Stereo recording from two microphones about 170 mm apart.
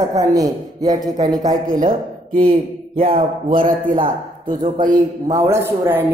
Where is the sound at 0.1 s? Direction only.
20° right (ahead or behind).